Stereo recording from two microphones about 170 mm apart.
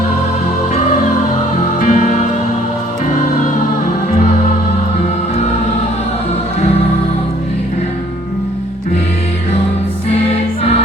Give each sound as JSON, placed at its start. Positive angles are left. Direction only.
{"t": 1.8, "sound": "music", "side_deg": 45}